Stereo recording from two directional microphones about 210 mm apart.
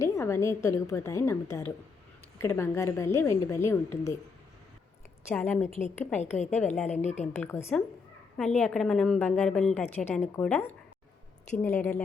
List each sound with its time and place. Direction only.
0.0 s a woman's voice: 15° left (ahead or behind)
5.3 s a woman's voice: 5° left (ahead or behind)
5.6 s a woman's voice: 35° left (ahead or behind)
7.3 s a woman's voice: 10° left (ahead or behind)